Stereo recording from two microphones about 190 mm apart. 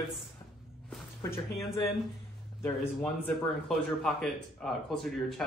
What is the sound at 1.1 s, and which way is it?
Speech, 15° left (ahead or behind).